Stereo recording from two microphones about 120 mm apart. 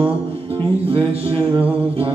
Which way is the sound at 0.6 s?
50° right (ahead or behind).